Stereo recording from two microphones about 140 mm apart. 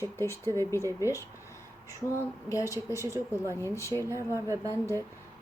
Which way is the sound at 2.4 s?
20° left (ahead or behind).